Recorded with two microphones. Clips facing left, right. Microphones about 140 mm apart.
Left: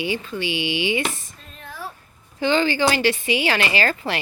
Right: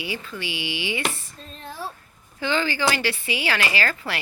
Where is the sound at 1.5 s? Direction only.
30° right (ahead or behind).